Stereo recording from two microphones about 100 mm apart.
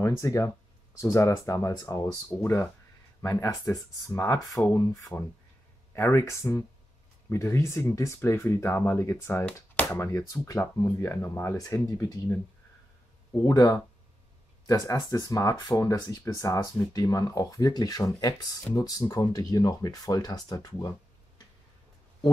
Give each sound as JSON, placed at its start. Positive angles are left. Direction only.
{"t": 0.0, "sound": "speech", "side_deg": 30}
{"t": 13.5, "sound": "speech", "side_deg": 35}
{"t": 15.0, "sound": "speech", "side_deg": 40}